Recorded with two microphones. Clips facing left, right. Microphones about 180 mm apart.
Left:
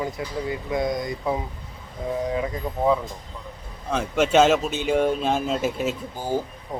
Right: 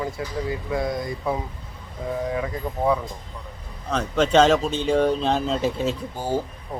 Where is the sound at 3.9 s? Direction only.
10° left (ahead or behind).